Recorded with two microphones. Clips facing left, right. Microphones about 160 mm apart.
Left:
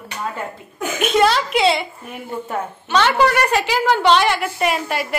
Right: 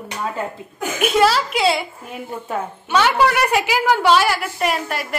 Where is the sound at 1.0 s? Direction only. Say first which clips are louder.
Even; 5° right (ahead or behind).